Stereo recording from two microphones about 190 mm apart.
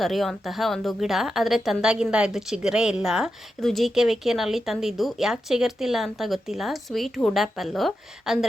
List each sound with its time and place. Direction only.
0.0 s a woman's voice: centre (ahead or behind)